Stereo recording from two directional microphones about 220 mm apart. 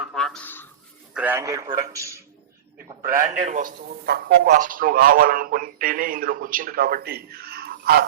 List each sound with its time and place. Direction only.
0.0 s a sound: centre (ahead or behind)
1.1 s a man's voice: 10° right (ahead or behind)
3.1 s a man's voice: 35° right (ahead or behind)